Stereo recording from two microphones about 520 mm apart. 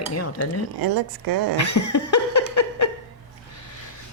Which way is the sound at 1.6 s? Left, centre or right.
Left.